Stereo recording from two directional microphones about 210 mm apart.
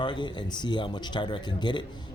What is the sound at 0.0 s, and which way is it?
Speech, 20° left (ahead or behind).